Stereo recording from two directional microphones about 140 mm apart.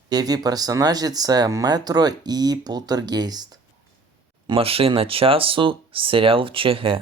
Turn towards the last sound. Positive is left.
turn(degrees=-40)  # may be behind; listen again after turning